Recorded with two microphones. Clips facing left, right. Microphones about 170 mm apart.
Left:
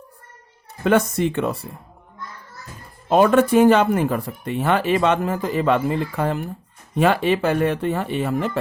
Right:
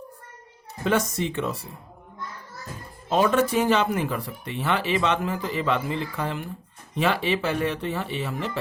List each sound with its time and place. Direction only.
0.9 s speech: 55° left (ahead or behind)
3.1 s speech: 55° left (ahead or behind)